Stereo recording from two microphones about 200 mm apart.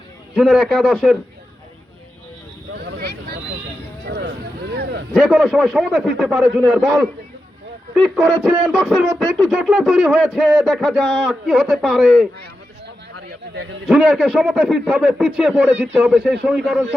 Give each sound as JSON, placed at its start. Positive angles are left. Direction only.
{"t": 0.3, "sound": "speech", "side_deg": -5}
{"t": 2.7, "sound": "a sound", "side_deg": -55}
{"t": 5.1, "sound": "speech", "side_deg": 0}
{"t": 13.8, "sound": "speech", "side_deg": -5}